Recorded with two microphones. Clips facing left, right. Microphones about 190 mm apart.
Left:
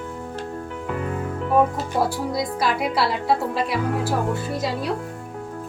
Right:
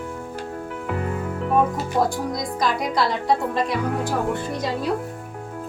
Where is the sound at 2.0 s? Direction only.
5° left (ahead or behind).